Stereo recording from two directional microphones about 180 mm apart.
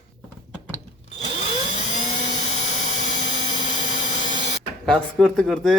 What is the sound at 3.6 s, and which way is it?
Vacuum cleaner, 45° left (ahead or behind).